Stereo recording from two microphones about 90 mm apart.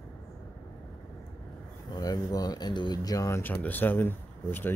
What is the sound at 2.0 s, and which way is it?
Speech, 45° left (ahead or behind).